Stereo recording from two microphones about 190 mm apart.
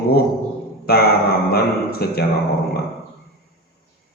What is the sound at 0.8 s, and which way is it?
A man's voice, 55° left (ahead or behind).